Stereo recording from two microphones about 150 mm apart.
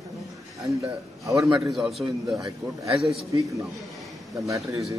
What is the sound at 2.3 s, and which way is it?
Speech, 20° right (ahead or behind).